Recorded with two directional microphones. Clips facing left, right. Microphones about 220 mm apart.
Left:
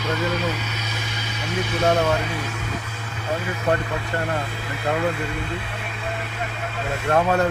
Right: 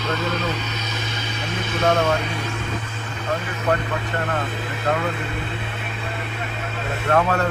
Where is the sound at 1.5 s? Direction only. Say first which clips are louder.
Left 1 dB; 10° left (ahead or behind).